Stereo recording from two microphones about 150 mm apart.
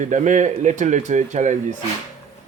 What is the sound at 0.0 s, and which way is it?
Speech, 55° right (ahead or behind).